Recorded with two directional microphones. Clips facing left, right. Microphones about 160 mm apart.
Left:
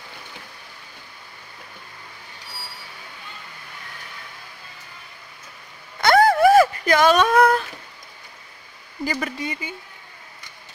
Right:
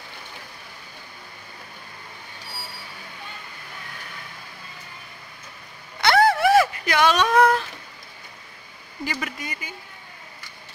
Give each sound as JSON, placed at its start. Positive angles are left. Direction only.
{"t": 6.0, "sound": "a sound", "side_deg": 50}
{"t": 9.0, "sound": "speech", "side_deg": 40}
{"t": 9.4, "sound": "speech", "side_deg": 25}